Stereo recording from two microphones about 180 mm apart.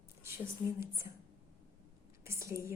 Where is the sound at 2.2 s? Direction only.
15° right (ahead or behind).